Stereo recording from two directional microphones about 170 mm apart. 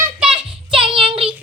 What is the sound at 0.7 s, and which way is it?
Child singing, 30° right (ahead or behind).